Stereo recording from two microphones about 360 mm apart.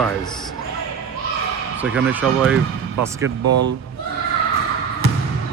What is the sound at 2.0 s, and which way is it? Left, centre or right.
Speech, centre.